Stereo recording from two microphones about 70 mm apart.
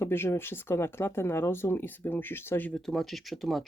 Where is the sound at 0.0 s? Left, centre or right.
Left.